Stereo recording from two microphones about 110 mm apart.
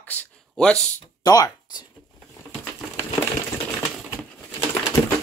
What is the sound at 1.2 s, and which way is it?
Speech, 35° left (ahead or behind).